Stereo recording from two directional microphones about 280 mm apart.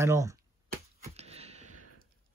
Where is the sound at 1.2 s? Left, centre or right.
Right.